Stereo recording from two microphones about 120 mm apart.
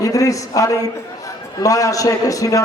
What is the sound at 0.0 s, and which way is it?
A man's voice, 30° left (ahead or behind).